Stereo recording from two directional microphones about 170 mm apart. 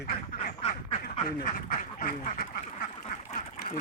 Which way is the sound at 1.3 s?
55° left (ahead or behind).